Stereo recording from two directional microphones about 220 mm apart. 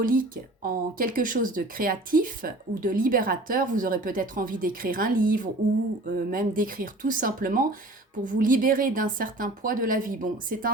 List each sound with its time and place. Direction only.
0.0 s speech: 40° right (ahead or behind)